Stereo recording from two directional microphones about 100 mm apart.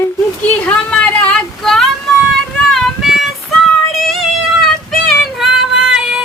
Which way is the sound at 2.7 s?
Centre (ahead or behind).